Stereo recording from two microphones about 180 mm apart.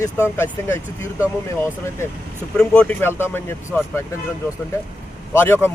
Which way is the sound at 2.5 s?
5° left (ahead or behind).